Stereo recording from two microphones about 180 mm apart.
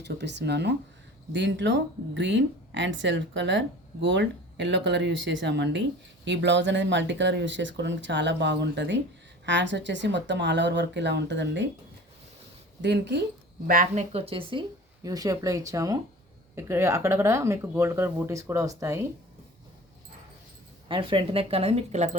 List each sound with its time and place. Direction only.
0.0 s speech: 70° right (ahead or behind)
12.8 s speech: 70° right (ahead or behind)
13.7 s speech: 50° right (ahead or behind)
14.1 s speech: 35° right (ahead or behind)
15.0 s speech: 20° right (ahead or behind)
20.8 s speech: 30° right (ahead or behind)